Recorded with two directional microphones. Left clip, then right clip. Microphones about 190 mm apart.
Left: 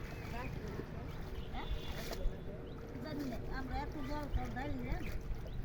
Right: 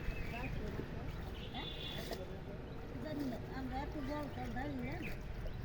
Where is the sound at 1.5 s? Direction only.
15° right (ahead or behind).